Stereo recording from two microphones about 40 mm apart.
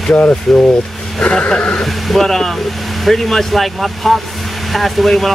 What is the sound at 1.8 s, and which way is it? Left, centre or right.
Speech, centre.